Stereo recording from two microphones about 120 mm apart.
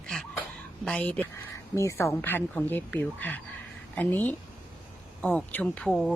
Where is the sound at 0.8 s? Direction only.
10° left (ahead or behind).